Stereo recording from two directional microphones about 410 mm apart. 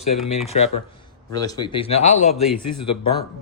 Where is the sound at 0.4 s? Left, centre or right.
Centre.